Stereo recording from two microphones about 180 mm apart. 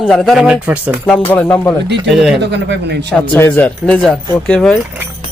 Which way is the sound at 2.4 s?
75° right (ahead or behind).